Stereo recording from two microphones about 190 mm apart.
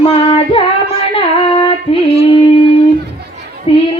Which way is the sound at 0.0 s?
30° left (ahead or behind).